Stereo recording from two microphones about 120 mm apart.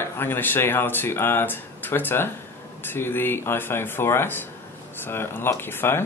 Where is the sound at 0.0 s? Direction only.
20° left (ahead or behind).